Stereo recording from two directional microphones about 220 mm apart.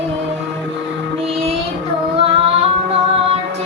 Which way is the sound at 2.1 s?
25° right (ahead or behind).